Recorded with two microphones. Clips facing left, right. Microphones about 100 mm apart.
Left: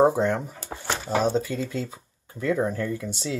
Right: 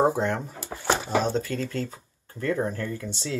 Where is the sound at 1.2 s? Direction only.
10° left (ahead or behind).